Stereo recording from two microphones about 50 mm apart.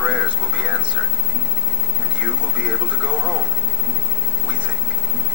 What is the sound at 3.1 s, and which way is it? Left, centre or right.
Speech, left.